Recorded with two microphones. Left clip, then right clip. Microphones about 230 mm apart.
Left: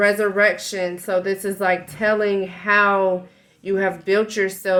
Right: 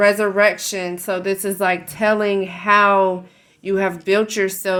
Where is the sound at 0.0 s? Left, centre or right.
Right.